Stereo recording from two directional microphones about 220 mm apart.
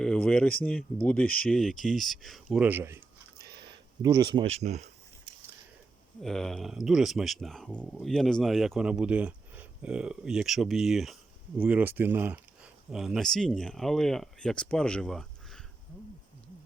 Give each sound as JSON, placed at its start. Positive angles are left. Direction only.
{"t": 0.0, "sound": "speech", "side_deg": 5}
{"t": 6.2, "sound": "speech", "side_deg": 0}